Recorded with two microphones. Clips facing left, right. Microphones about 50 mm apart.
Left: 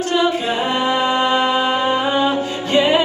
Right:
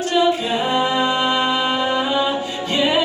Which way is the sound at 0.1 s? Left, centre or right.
Left.